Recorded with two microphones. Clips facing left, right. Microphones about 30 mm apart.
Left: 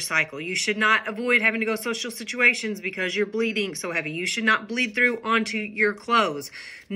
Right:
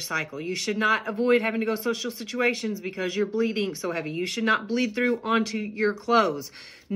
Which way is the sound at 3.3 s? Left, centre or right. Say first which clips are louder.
Left 1 dB; left.